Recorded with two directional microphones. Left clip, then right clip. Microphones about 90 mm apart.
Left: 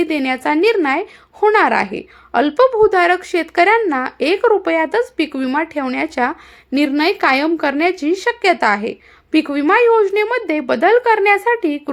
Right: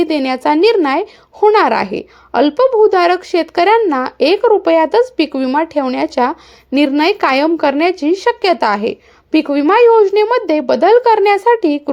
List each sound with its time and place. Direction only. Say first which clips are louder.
0.0 s speech: right 3 dB; 35° right (ahead or behind)
2.3 s speech: right 2 dB; 25° right (ahead or behind)
4.4 s speech: right 1 dB; 20° right (ahead or behind)
4.7 s speech: right 5 dB; 35° right (ahead or behind)
7.0 s speech: right 1 dB; 25° right (ahead or behind)
7.9 s speech: right 4 dB; 20° right (ahead or behind)
8.3 s speech: right 1 dB; 30° right (ahead or behind)
9.3 s speech: right 3 dB; 25° right (ahead or behind); by 11.8 s 45° right (ahead or behind)